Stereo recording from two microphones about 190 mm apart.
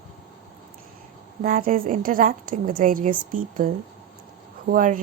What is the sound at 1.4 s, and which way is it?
A woman's voice, 50° right (ahead or behind).